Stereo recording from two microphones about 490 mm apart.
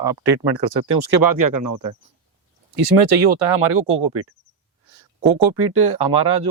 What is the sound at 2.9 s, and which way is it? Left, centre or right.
Speech, right.